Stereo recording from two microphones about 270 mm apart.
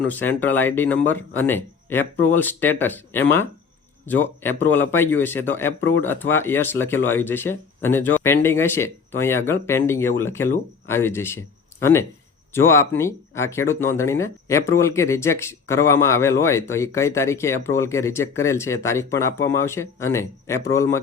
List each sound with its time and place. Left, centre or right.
0.0 s speech: centre